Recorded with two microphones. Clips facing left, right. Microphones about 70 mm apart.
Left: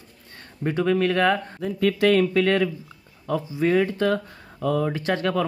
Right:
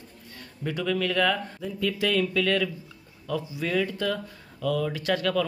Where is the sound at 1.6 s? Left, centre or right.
Left.